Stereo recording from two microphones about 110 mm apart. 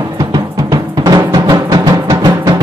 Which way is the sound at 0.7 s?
35° right (ahead or behind).